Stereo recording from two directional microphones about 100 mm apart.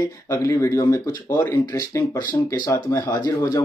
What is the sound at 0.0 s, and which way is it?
Speech, 35° left (ahead or behind).